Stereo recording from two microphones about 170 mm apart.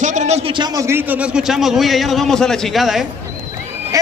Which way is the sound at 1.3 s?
Centre (ahead or behind).